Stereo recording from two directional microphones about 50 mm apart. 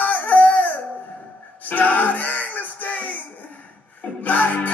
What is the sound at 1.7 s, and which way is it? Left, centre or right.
Music, left.